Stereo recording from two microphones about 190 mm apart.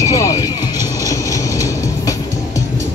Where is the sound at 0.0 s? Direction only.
15° left (ahead or behind).